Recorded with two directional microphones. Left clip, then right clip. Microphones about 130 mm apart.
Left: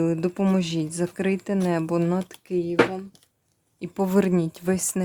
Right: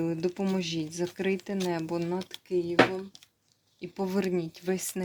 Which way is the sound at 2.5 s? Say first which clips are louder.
Left 2 dB; 90° left.